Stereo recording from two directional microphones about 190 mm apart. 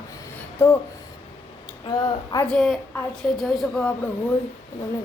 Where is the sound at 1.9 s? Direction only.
20° left (ahead or behind).